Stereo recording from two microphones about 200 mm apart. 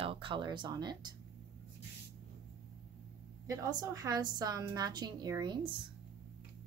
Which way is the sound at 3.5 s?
20° right (ahead or behind).